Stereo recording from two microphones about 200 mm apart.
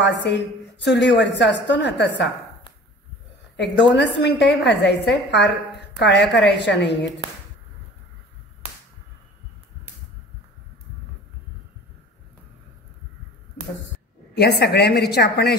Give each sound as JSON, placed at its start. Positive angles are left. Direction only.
{"t": 0.0, "sound": "a woman's voice", "side_deg": 60}
{"t": 3.5, "sound": "a woman's voice", "side_deg": 60}
{"t": 14.3, "sound": "a woman's voice", "side_deg": 55}